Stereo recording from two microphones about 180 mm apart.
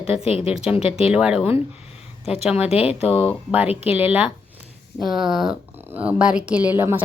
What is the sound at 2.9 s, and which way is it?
Speech, 30° left (ahead or behind).